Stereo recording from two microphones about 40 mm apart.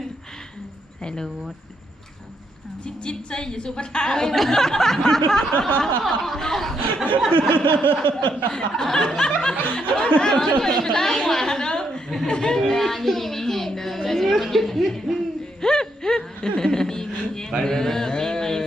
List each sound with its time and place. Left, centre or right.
1.0 s speech: centre
2.8 s a woman's voice: left
4.3 s speech: centre
5.5 s a sound: left
6.0 s a woman's voice: centre
7.5 s a sound: left
8.1 s speech: centre
11.3 s chuckle: centre
12.3 s speech: centre
12.6 s a woman's voice: centre
15.6 s a sound: centre
17.6 s mantra: centre